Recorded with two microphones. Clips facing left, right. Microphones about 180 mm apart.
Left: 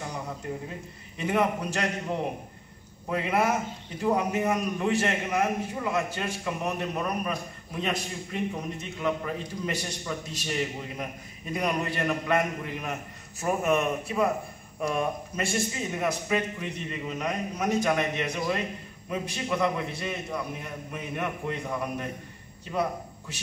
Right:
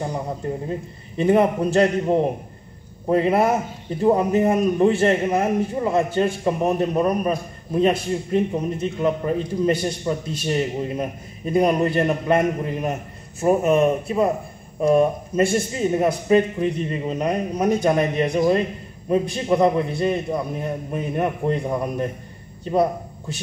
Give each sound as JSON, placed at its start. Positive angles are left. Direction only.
{"t": 0.4, "sound": "a man's voice", "side_deg": -35}
{"t": 13.4, "sound": "a man's voice", "side_deg": -30}